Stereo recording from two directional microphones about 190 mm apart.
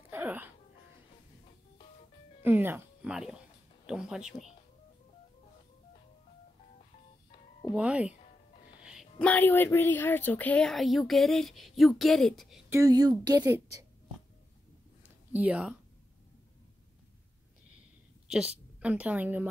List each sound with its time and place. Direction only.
0.1 s music: 10° right (ahead or behind)
2.4 s speech: 10° right (ahead or behind)
7.7 s a woman's voice: 5° right (ahead or behind)
9.2 s speech: 10° left (ahead or behind)
12.6 s a woman's voice: 15° right (ahead or behind)
15.0 s speech: 10° right (ahead or behind)
18.8 s a woman's voice: 5° right (ahead or behind)